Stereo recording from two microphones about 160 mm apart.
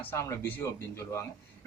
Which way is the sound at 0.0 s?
15° left (ahead or behind).